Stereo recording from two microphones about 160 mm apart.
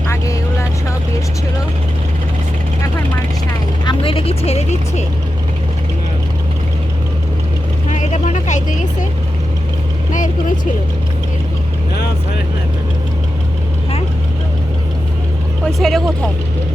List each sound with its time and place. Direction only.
3.8 s vehicle: 35° left (ahead or behind)
7.9 s vehicle: 50° left (ahead or behind)
10.1 s vehicle: 50° left (ahead or behind)
15.6 s vehicle: centre (ahead or behind)